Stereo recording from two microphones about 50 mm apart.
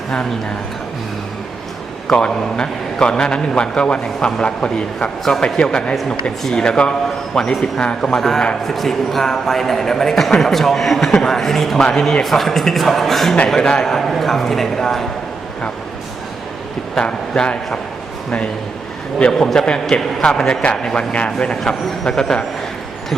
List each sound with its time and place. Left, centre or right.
2.1 s a man's voice: centre
12.2 s a man's voice: centre
13.6 s a man's voice: centre
13.9 s a man's voice: centre
16.9 s a man's voice: centre
19.3 s a man's voice: centre